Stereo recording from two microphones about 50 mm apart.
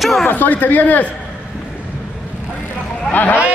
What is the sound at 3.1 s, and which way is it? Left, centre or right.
Speech, left.